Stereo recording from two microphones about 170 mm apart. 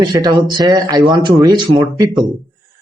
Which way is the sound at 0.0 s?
25° right (ahead or behind).